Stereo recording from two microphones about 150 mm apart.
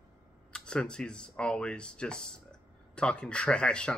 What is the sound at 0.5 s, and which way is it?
Speech, 5° left (ahead or behind).